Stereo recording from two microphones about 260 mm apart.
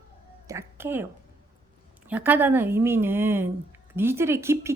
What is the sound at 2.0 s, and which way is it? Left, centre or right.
Speech, centre.